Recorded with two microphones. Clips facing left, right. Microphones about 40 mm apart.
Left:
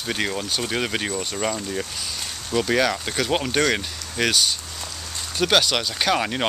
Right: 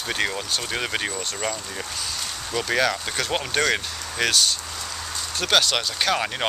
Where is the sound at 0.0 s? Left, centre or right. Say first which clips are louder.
Even; centre.